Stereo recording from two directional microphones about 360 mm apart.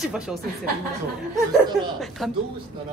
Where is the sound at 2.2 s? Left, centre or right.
Centre.